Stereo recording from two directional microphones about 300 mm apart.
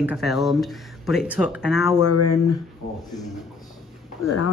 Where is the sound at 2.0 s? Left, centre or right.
Left.